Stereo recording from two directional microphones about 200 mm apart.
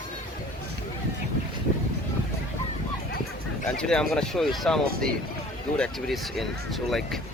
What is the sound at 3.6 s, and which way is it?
Speech, 5° left (ahead or behind).